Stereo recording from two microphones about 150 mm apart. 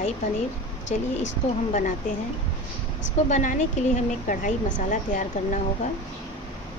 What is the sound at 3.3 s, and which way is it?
A woman's voice, 55° left (ahead or behind).